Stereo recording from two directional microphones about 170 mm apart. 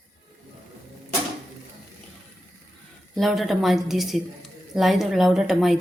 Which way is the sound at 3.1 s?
Centre (ahead or behind).